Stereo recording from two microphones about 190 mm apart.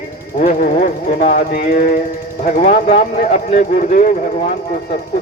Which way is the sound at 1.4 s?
55° left (ahead or behind).